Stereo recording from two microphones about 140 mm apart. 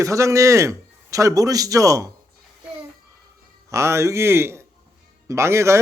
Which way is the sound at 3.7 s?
20° right (ahead or behind).